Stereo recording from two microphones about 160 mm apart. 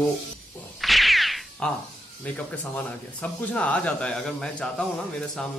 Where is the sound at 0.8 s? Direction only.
Centre (ahead or behind).